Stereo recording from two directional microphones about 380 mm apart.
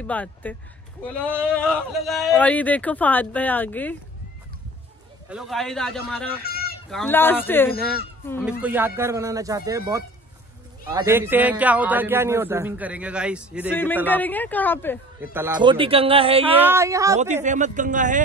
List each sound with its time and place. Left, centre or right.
0.0 s speech: centre
5.3 s speech: centre
6.4 s a sound: left
6.9 s speech: centre
15.3 s speech: centre